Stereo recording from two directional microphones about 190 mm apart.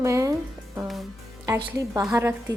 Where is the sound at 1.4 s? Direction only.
15° right (ahead or behind).